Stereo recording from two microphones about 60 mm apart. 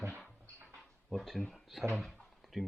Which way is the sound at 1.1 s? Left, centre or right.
Centre.